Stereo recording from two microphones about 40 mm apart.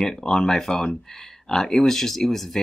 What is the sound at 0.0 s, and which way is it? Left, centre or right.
Speech, centre.